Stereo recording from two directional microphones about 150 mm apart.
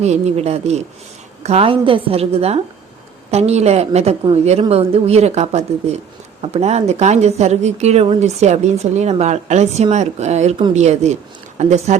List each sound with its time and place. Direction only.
0.0 s a woman's voice: 45° right (ahead or behind)